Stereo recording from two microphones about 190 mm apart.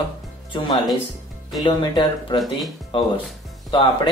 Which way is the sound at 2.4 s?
Centre (ahead or behind).